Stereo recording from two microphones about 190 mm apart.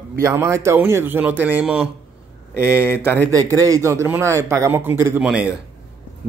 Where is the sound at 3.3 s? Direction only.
20° right (ahead or behind).